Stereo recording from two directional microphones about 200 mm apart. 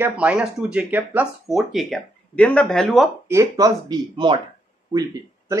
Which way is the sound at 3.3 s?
15° right (ahead or behind).